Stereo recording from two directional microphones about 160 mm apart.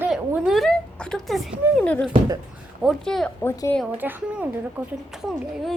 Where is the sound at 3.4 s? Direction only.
15° left (ahead or behind).